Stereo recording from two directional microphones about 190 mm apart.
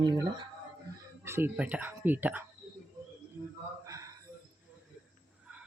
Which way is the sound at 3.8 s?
15° right (ahead or behind).